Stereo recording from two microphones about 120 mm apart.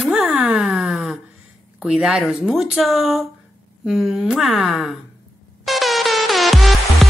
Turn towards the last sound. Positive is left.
turn(degrees=0)  # may be behind; listen again after turning